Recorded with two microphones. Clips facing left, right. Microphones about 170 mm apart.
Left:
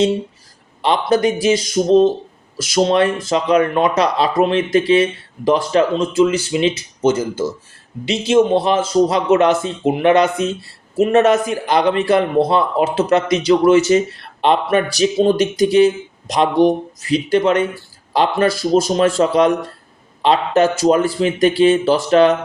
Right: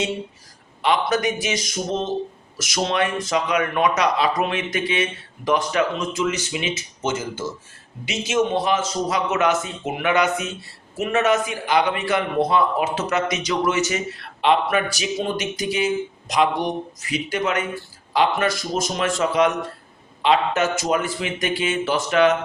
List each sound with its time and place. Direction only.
0.8 s a man's voice: 35° left (ahead or behind)